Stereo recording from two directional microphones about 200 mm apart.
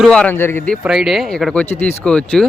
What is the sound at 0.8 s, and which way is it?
Speech, 5° right (ahead or behind).